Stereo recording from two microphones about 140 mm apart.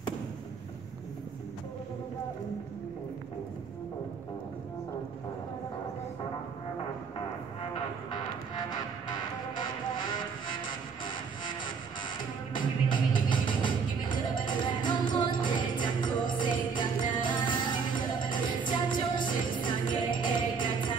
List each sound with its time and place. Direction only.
8.5 s music: 30° left (ahead or behind)
12.5 s music: 35° left (ahead or behind)